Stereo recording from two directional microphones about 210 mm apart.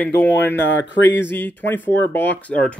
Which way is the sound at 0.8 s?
60° left (ahead or behind).